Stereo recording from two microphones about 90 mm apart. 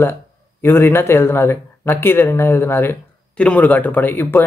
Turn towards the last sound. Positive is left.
turn(degrees=25)  # may be behind; listen again after turning